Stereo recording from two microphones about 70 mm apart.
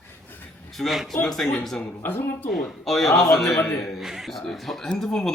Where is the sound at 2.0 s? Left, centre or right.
Left.